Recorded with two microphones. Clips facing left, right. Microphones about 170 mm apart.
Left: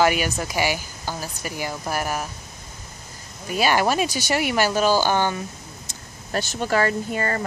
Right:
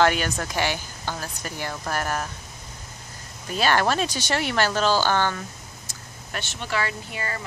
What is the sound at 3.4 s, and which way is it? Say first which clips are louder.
Speech: left 2 dB; 10° left (ahead or behind).